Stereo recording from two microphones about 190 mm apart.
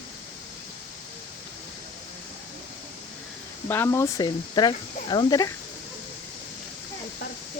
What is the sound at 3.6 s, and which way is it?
Speech, 10° left (ahead or behind).